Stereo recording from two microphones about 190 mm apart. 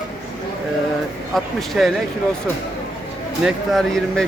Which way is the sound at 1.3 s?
Centre (ahead or behind).